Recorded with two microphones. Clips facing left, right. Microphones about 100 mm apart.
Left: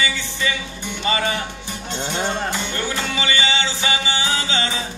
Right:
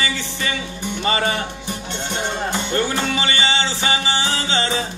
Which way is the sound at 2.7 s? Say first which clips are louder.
Right 4 dB; 35° right (ahead or behind).